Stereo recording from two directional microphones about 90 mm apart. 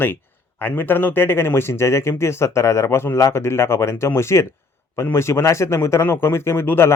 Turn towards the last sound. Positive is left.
turn(degrees=25)  # may be behind; listen again after turning